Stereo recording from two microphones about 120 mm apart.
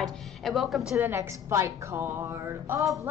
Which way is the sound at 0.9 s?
20° right (ahead or behind).